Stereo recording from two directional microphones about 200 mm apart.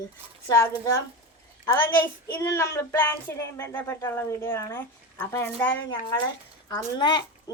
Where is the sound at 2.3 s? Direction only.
15° left (ahead or behind).